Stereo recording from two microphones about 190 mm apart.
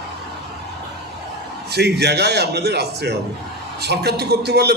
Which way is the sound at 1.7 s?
60° right (ahead or behind).